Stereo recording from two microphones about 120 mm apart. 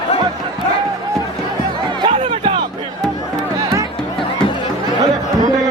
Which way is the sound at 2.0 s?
50° right (ahead or behind).